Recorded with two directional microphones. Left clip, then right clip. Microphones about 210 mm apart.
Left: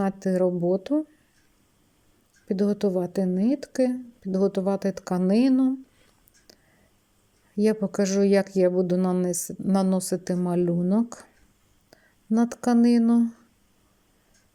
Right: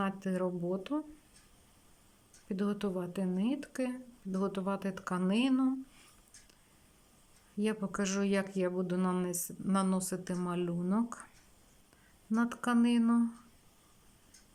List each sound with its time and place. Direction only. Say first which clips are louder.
0.0 s speech: left 11 dB; 25° left (ahead or behind)
2.5 s speech: left 12 dB; 25° left (ahead or behind)
7.6 s speech: left 11 dB; 25° left (ahead or behind)
12.3 s speech: left 9 dB; 25° left (ahead or behind)